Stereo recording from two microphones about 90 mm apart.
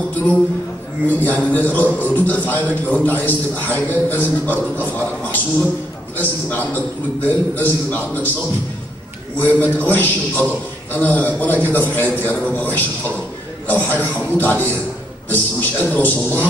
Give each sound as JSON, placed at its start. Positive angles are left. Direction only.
{"t": 1.0, "sound": "a man's voice", "side_deg": 20}
{"t": 9.4, "sound": "a man's voice", "side_deg": 20}